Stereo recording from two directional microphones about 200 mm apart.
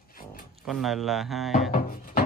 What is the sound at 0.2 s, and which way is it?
Music, 45° left (ahead or behind).